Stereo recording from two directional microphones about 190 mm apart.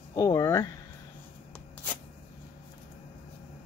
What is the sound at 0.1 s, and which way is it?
Speech, 15° left (ahead or behind).